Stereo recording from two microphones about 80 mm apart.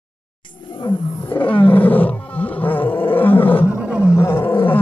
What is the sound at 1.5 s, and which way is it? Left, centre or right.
Roar, left.